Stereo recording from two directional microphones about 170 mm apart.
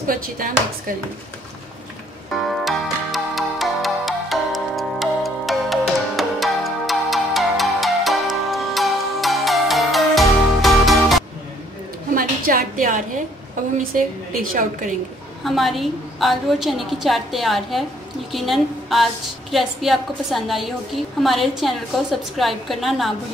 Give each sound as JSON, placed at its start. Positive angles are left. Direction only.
{"t": 0.0, "sound": "speech", "side_deg": -55}
{"t": 2.5, "sound": "music", "side_deg": 0}
{"t": 12.1, "sound": "a sound", "side_deg": -55}
{"t": 13.9, "sound": "a woman's voice", "side_deg": -55}
{"t": 15.4, "sound": "a woman's voice", "side_deg": 0}